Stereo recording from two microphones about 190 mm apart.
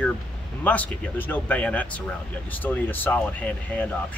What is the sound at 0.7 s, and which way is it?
Speech, 10° left (ahead or behind).